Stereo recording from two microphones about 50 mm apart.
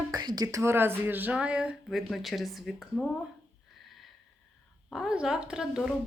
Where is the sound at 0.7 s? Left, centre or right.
Right.